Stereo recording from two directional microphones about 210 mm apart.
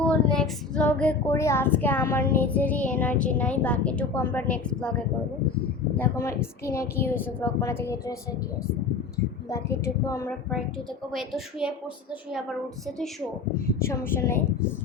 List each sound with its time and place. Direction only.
0.0 s child singing: 5° left (ahead or behind)
2.4 s a woman's voice: 10° left (ahead or behind)
9.5 s a woman's voice: 15° left (ahead or behind)
11.1 s a woman's voice: centre (ahead or behind)
13.8 s a woman's voice: 10° left (ahead or behind)